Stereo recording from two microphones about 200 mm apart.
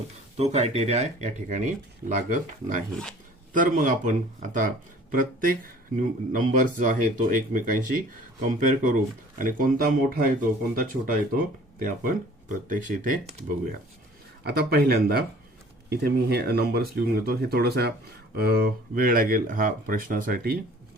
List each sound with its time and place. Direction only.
0.3 s speech: 30° right (ahead or behind)
2.9 s speech: 5° left (ahead or behind)
3.5 s speech: 40° right (ahead or behind)
14.4 s speech: 50° right (ahead or behind)